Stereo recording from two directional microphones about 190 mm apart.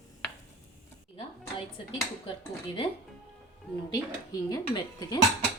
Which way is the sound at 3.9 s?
20° left (ahead or behind).